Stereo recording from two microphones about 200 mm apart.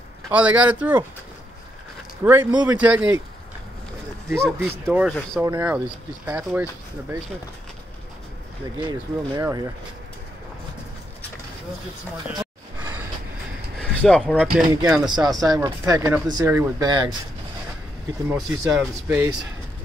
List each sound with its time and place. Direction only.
0.3 s speech: 5° right (ahead or behind)
2.2 s speech: 10° right (ahead or behind)
4.4 s speech: 5° left (ahead or behind)
4.6 s speech: 10° right (ahead or behind)
8.7 s speech: 25° right (ahead or behind)
12.7 s a sound: 10° right (ahead or behind)
13.7 s speech: 5° left (ahead or behind)
15.0 s speech: 20° right (ahead or behind)
18.3 s speech: 10° right (ahead or behind)